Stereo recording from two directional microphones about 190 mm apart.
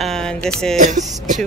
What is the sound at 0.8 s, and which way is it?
Speech, 40° right (ahead or behind).